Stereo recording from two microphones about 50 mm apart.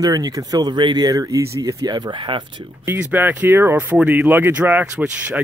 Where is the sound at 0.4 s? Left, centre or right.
Right.